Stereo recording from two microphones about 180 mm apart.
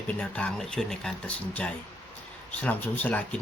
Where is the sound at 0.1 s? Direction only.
5° left (ahead or behind).